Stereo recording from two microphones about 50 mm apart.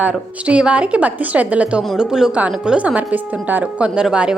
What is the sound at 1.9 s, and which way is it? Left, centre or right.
Speech, centre.